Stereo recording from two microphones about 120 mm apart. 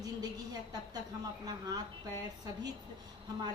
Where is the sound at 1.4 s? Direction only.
35° right (ahead or behind).